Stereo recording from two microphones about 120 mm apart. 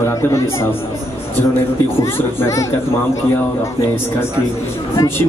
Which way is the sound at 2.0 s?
20° left (ahead or behind).